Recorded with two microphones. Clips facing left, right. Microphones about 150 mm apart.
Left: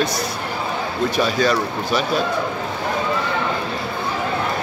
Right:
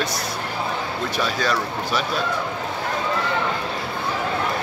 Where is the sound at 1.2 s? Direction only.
5° left (ahead or behind).